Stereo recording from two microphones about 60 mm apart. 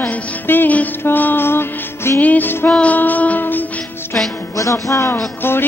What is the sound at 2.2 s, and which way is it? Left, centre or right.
Music, left.